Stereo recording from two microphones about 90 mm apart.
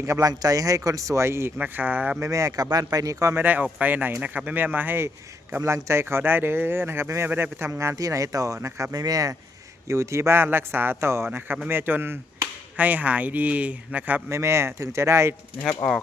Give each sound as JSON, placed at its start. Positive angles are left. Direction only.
{"t": 0.0, "sound": "a man's voice", "side_deg": -35}
{"t": 2.2, "sound": "speech", "side_deg": -35}
{"t": 3.3, "sound": "a man's voice", "side_deg": -20}
{"t": 14.3, "sound": "speech", "side_deg": -30}